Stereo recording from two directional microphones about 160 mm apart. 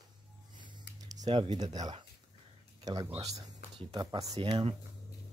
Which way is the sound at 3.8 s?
30° right (ahead or behind).